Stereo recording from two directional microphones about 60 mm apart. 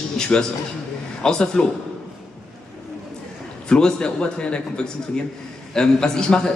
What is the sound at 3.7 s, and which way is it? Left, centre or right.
A man's voice, centre.